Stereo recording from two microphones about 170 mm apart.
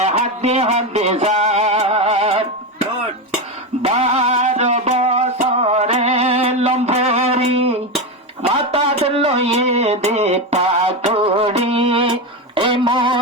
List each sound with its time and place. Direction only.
0.0 s music: 40° right (ahead or behind)
3.8 s music: 40° right (ahead or behind)
8.4 s a sound: 35° right (ahead or behind)